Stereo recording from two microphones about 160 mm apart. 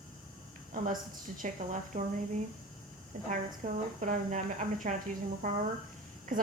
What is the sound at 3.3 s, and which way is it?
A woman's voice, 50° right (ahead or behind).